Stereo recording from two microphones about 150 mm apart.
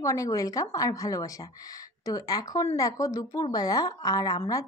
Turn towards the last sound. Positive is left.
turn(degrees=25)  # may be behind; listen again after turning